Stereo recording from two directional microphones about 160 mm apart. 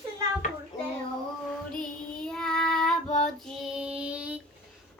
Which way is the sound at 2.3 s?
5° left (ahead or behind).